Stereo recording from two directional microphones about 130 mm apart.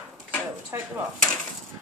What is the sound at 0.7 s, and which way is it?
Speech, 20° right (ahead or behind).